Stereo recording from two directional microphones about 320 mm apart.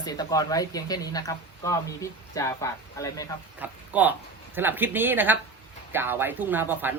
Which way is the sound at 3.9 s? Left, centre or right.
Centre.